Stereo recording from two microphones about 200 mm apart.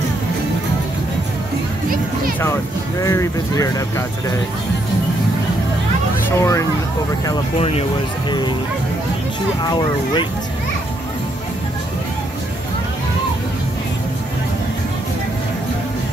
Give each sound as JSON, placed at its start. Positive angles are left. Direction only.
{"t": 3.0, "sound": "speech", "side_deg": 15}
{"t": 6.2, "sound": "speech", "side_deg": 15}
{"t": 7.5, "sound": "speech", "side_deg": 30}
{"t": 9.7, "sound": "speech", "side_deg": 20}